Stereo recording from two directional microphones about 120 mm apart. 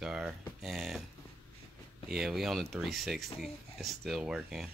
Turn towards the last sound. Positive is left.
turn(degrees=-5)  # may be behind; listen again after turning